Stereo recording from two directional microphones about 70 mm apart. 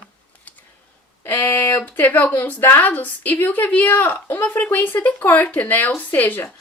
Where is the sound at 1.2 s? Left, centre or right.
Left.